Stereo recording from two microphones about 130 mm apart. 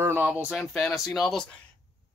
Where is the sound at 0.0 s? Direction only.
15° right (ahead or behind).